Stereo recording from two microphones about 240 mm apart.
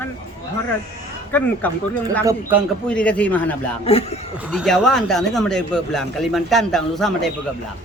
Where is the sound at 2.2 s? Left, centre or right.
Centre.